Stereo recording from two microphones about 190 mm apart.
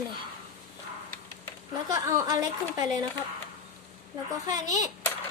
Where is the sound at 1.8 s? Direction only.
15° right (ahead or behind).